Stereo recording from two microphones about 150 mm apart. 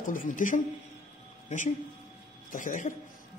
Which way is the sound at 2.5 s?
60° left (ahead or behind).